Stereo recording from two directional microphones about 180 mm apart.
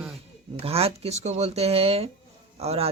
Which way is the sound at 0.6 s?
35° right (ahead or behind).